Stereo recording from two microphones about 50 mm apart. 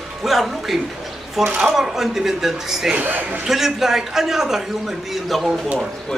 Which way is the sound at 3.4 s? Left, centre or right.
Centre.